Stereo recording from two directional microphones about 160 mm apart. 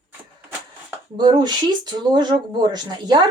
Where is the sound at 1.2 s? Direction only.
25° right (ahead or behind).